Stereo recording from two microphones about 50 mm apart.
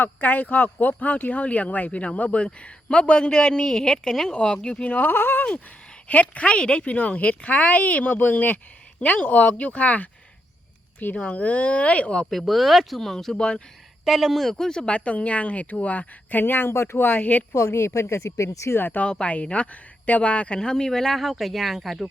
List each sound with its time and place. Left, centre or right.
0.0 s speech: left
4.9 s speech: left
6.1 s speech: left
11.1 s speech: left
12.2 s speech: centre
14.0 s speech: centre
14.4 s speech: centre
14.8 s speech: left
17.7 s speech: left
18.8 s speech: left
19.0 s speech: left
20.6 s speech: centre